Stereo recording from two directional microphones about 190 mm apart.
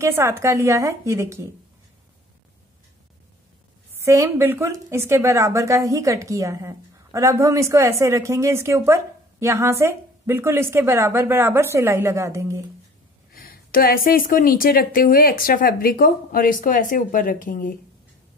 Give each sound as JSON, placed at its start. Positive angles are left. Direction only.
{"t": 0.0, "sound": "a woman's voice", "side_deg": -15}
{"t": 3.9, "sound": "a woman's voice", "side_deg": -15}
{"t": 13.3, "sound": "speech", "side_deg": 50}